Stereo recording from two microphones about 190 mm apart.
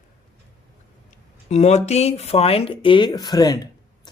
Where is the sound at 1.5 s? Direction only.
35° left (ahead or behind).